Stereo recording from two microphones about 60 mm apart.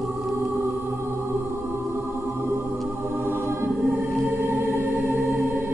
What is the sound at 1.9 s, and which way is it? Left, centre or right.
Music, right.